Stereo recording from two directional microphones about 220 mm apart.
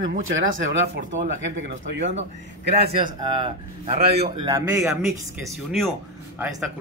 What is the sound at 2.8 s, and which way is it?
A man's voice, 20° right (ahead or behind).